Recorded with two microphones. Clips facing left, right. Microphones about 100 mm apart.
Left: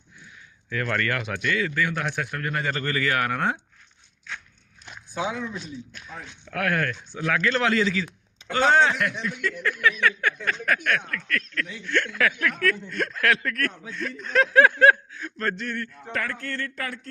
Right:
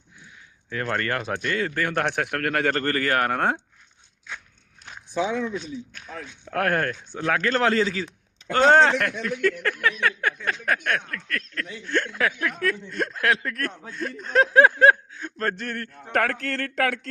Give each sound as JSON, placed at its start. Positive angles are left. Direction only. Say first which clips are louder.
{"t": 0.7, "sound": "a man's voice", "louder": "even", "side_deg": -30}
{"t": 6.4, "sound": "a man's voice", "louder": "right 2 dB", "side_deg": -40}
{"t": 8.5, "sound": "a man's voice", "louder": "right 3 dB", "side_deg": -55}
{"t": 15.4, "sound": "a man's voice", "louder": "right 1 dB", "side_deg": -40}
{"t": 16.2, "sound": "speech", "louder": "right 5 dB", "side_deg": -80}